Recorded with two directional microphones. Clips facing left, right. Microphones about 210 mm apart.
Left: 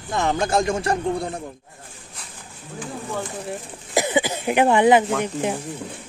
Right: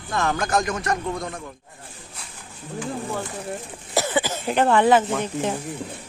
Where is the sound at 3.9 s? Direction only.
15° left (ahead or behind).